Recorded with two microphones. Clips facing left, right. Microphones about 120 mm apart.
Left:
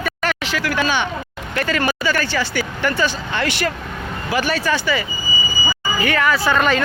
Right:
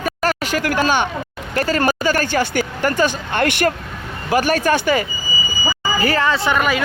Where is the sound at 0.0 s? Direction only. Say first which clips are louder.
Right 3 dB; 40° right (ahead or behind).